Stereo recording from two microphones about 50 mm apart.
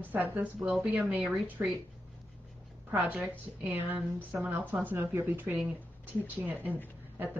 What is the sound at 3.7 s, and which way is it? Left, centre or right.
A woman's voice, right.